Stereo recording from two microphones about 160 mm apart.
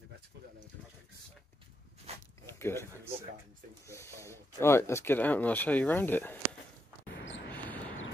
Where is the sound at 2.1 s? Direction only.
40° right (ahead or behind).